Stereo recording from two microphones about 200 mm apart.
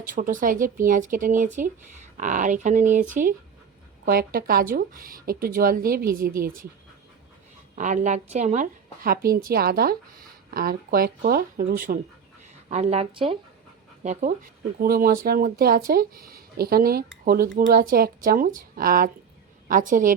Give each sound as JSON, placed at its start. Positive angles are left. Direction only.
{"t": 0.0, "sound": "a woman's voice", "side_deg": -40}
{"t": 7.8, "sound": "a woman's voice", "side_deg": -40}
{"t": 12.6, "sound": "speech", "side_deg": -35}
{"t": 14.8, "sound": "a woman's voice", "side_deg": -50}